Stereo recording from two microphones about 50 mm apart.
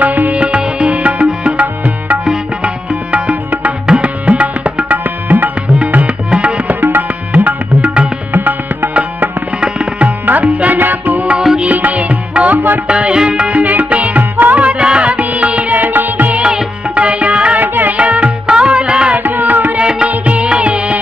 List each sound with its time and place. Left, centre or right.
0.0 s music: right
0.4 s music: centre
4.0 s tabla: right
5.9 s tabla: right
6.8 s music: right
9.6 s tabla: centre
10.0 s tabla: right
10.5 s music: right
10.8 s music: right
12.8 s music: right
16.4 s music: centre
17.6 s music: right
19.1 s music: right
19.8 s music: centre